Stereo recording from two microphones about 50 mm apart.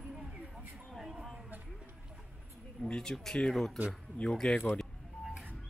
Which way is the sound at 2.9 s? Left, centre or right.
Centre.